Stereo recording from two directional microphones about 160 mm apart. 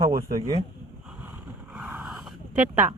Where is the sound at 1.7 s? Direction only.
10° right (ahead or behind).